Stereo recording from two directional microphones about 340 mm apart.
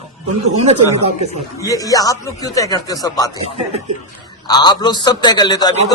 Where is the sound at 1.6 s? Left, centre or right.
Centre.